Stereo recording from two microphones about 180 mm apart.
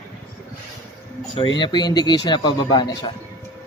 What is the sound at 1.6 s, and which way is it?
Speech, 25° left (ahead or behind).